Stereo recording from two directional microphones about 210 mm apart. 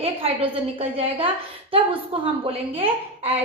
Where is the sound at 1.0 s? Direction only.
25° right (ahead or behind).